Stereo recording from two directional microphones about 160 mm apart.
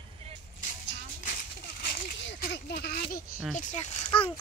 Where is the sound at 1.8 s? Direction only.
65° left (ahead or behind); by 3.0 s 80° left.